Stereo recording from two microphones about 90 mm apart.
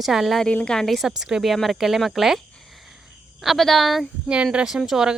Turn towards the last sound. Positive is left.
turn(degrees=-5)  # may be behind; listen again after turning